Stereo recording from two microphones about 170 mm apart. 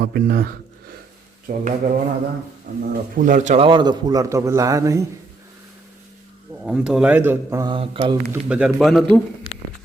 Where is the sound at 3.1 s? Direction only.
50° right (ahead or behind); by 5.1 s 20° right (ahead or behind).